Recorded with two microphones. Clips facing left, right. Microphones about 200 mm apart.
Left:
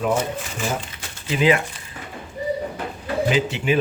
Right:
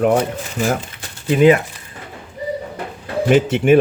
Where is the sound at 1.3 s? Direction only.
45° right (ahead or behind).